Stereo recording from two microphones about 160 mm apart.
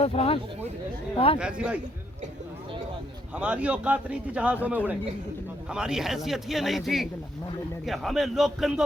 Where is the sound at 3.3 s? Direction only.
10° right (ahead or behind).